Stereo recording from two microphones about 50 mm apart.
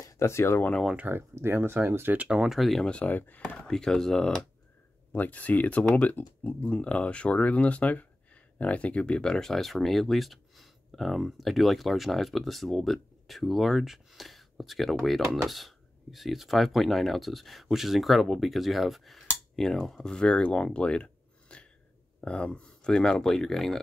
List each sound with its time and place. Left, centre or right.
0.2 s speech: left
1.1 s speech: right
1.5 s speech: right
2.2 s speech: centre
2.8 s speech: left
3.1 s speech: left
3.5 s speech: centre
5.1 s speech: left
6.6 s speech: left; by 23.8 s centre